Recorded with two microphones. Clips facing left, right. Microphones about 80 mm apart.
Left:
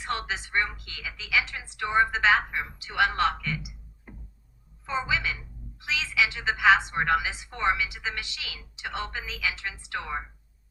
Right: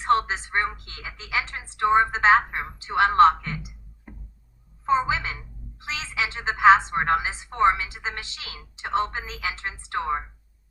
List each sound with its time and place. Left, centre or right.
0.0 s a woman's voice: right
4.9 s a woman's voice: right